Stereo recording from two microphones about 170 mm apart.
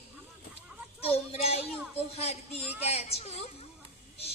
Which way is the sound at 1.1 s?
35° left (ahead or behind).